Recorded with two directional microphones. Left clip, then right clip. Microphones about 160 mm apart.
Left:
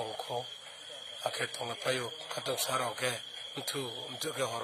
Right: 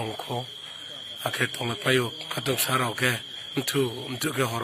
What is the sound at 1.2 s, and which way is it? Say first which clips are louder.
Speech: right 7 dB; 10° right (ahead or behind).